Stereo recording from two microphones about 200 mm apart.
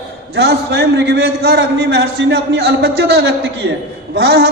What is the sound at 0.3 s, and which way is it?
A man's voice, 55° right (ahead or behind).